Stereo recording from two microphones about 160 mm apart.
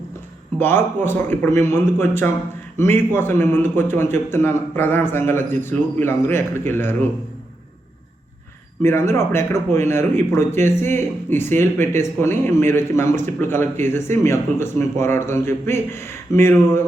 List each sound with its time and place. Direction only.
0.6 s speech: 15° left (ahead or behind)
8.8 s speech: 15° left (ahead or behind)